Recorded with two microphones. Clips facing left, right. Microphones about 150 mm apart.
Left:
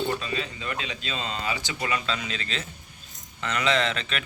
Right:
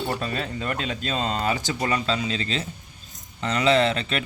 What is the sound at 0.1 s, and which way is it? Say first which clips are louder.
Speech: right 2 dB; 45° right (ahead or behind).